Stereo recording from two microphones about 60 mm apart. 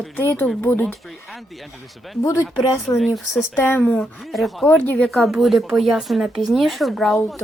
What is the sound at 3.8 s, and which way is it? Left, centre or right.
Speech, centre.